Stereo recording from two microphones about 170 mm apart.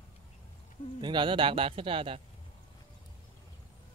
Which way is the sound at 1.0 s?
25° right (ahead or behind).